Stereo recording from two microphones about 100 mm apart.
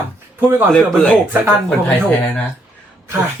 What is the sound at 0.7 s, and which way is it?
Speech, 10° left (ahead or behind).